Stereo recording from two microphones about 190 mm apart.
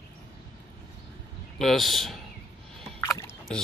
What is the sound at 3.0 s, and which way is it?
Rowboat, 15° left (ahead or behind).